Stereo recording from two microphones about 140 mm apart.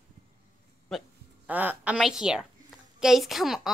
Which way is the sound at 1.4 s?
10° right (ahead or behind).